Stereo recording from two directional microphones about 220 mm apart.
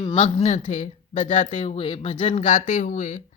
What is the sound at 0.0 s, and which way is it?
Speech, 25° left (ahead or behind).